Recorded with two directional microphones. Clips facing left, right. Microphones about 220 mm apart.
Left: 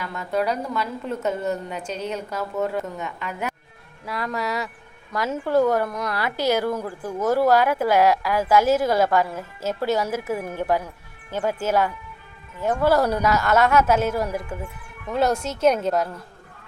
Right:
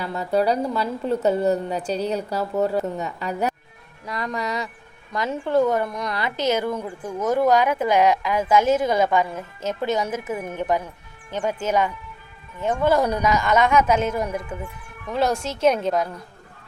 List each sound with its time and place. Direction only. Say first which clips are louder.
0.0 s a woman's voice: right 3 dB; 35° right (ahead or behind)
4.0 s a woman's voice: even; 5° left (ahead or behind)
6.3 s a woman's voice: left 1 dB; 20° right (ahead or behind)
6.7 s a woman's voice: left 1 dB; centre (ahead or behind)